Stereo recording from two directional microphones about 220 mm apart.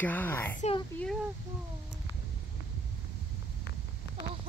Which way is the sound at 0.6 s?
25° left (ahead or behind).